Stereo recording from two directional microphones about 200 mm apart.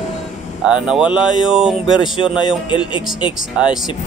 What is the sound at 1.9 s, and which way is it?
Speech, 25° left (ahead or behind).